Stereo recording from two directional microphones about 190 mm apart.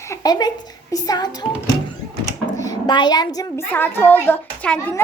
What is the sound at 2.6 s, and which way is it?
A woman's voice, 20° left (ahead or behind).